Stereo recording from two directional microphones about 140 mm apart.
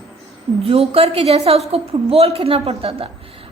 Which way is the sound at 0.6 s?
45° right (ahead or behind).